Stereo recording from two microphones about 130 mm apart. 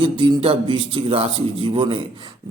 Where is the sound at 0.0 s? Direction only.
40° right (ahead or behind).